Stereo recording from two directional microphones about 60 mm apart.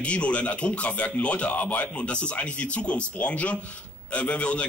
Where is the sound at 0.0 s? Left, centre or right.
Left.